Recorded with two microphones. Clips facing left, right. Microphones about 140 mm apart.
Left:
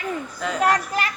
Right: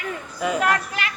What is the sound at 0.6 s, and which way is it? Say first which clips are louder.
Speech: left 2 dB; 40° left (ahead or behind).